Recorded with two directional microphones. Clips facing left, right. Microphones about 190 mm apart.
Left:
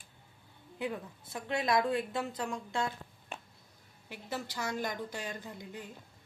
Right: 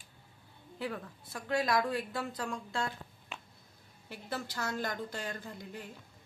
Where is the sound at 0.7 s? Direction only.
20° left (ahead or behind).